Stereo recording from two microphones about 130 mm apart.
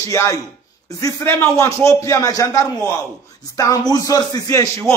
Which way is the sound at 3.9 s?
30° left (ahead or behind).